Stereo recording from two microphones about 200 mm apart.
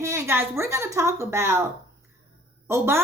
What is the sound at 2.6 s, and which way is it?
Speech, 15° right (ahead or behind).